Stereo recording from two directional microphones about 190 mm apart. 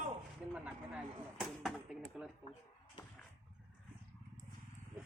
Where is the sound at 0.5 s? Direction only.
5° right (ahead or behind).